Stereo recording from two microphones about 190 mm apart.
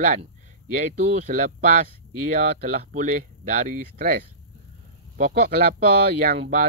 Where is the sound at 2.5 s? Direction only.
40° right (ahead or behind).